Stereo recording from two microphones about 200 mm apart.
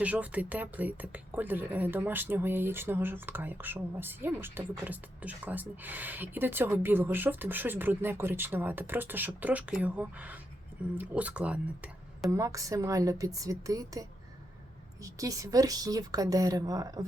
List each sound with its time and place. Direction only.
0.0 s speech: 5° right (ahead or behind)